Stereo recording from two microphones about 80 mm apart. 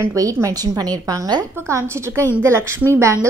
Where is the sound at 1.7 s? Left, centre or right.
Right.